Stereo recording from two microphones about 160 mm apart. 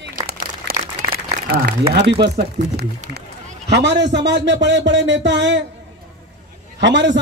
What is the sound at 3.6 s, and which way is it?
A man's voice, 90° right.